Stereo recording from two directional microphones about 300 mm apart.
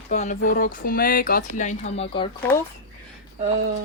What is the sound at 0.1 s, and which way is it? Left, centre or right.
Speech, left.